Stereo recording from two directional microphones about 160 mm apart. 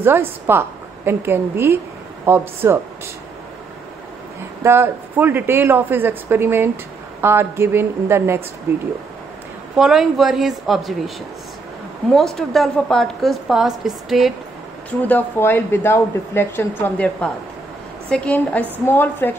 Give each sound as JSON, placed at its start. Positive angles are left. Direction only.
{"t": 0.0, "sound": "speech", "side_deg": -15}
{"t": 4.6, "sound": "speech", "side_deg": -15}
{"t": 9.8, "sound": "a woman's voice", "side_deg": 0}
{"t": 12.1, "sound": "a woman's voice", "side_deg": 0}
{"t": 15.0, "sound": "speech", "side_deg": 10}